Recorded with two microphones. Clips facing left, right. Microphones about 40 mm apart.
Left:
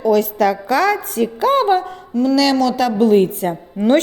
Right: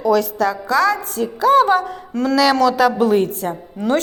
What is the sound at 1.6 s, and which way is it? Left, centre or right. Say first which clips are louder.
Speech: left 1 dB; centre.